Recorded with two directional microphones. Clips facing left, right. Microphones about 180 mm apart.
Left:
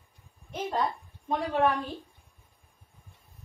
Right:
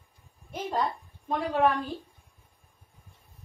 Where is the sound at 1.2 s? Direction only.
Centre (ahead or behind).